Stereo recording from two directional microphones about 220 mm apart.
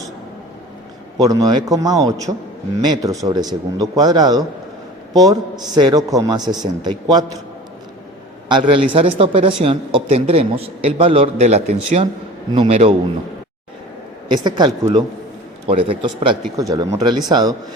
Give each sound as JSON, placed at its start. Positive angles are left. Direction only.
{"t": 1.2, "sound": "a man's voice", "side_deg": -15}
{"t": 8.4, "sound": "speech", "side_deg": -20}
{"t": 14.4, "sound": "speech", "side_deg": -20}